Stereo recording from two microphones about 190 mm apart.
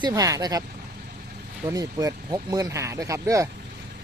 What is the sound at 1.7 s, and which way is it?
Speech, 20° right (ahead or behind).